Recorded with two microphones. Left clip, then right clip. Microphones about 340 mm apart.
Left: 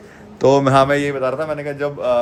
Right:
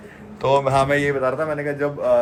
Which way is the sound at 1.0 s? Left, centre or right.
Centre.